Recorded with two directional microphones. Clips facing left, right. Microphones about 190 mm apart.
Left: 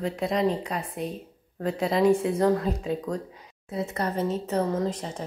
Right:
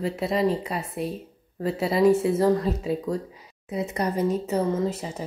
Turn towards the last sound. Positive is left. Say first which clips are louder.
# right 1 dB
turn(degrees=-5)  # may be behind; listen again after turning